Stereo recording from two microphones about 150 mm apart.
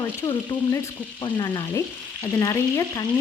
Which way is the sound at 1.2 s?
30° left (ahead or behind).